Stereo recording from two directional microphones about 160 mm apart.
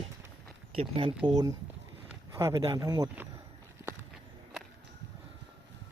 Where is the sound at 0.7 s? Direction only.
35° right (ahead or behind).